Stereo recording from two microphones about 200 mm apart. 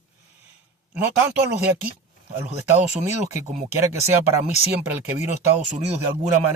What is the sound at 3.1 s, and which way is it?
Speech, 15° right (ahead or behind).